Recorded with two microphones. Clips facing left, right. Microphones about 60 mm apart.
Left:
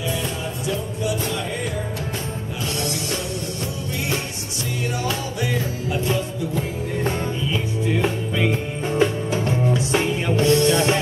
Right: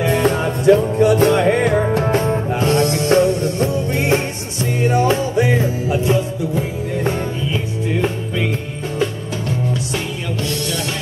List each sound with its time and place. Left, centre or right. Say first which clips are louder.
0.0 s music: right 10 dB; right
4.8 s music: right 11 dB; right; by 7.2 s centre
7.9 s music: right 2 dB; centre
8.9 s music: left 2 dB; left